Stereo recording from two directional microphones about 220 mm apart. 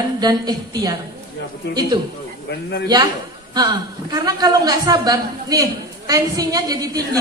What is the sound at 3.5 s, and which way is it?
A woman's voice, 20° right (ahead or behind).